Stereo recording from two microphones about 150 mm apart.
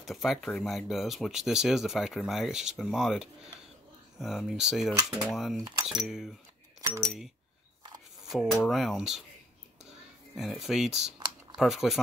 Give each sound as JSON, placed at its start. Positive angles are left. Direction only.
{"t": 0.0, "sound": "speech", "side_deg": 0}
{"t": 5.6, "sound": "speech", "side_deg": -25}
{"t": 5.9, "sound": "speech", "side_deg": -5}
{"t": 8.3, "sound": "speech", "side_deg": 0}
{"t": 10.3, "sound": "speech", "side_deg": 0}